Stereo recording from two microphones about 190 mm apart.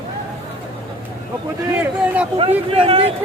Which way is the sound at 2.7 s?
30° right (ahead or behind).